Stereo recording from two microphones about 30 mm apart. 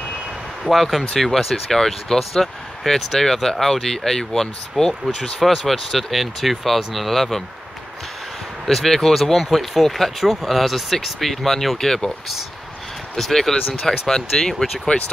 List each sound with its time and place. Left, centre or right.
0.7 s speech: centre
8.6 s speech: centre
13.2 s speech: centre
14.9 s speech: left